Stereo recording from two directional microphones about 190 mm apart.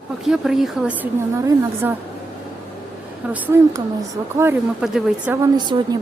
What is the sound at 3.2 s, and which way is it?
A woman's voice, 10° right (ahead or behind).